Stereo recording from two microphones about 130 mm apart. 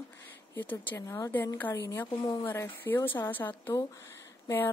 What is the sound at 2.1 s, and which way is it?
Speech, 30° left (ahead or behind).